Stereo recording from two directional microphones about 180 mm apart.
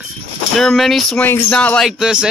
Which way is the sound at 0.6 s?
Centre (ahead or behind).